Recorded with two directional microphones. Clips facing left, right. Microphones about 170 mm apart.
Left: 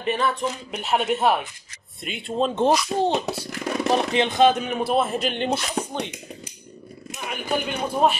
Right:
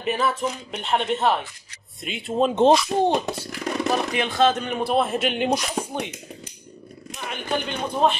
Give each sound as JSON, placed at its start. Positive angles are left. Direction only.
{"t": 0.0, "sound": "speech", "side_deg": -5}
{"t": 2.0, "sound": "speech", "side_deg": 0}
{"t": 2.5, "sound": "speech", "side_deg": -20}
{"t": 3.3, "sound": "a sound", "side_deg": 5}
{"t": 3.9, "sound": "speech", "side_deg": 25}
{"t": 7.2, "sound": "speech", "side_deg": 10}